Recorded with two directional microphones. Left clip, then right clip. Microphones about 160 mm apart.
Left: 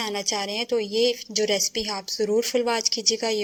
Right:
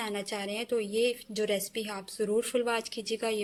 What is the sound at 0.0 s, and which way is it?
A woman's voice, 25° left (ahead or behind).